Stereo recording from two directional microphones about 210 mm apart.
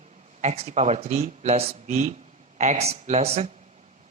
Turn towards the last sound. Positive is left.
turn(degrees=-30)  # may be behind; listen again after turning